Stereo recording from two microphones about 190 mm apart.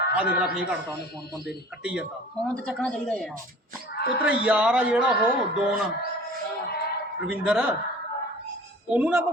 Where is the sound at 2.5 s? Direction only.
5° left (ahead or behind).